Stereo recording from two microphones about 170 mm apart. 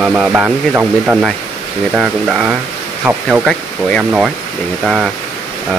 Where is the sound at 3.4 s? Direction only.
Centre (ahead or behind).